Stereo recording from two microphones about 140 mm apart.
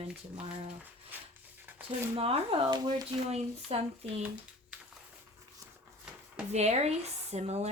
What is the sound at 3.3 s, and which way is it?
Speech, 50° right (ahead or behind).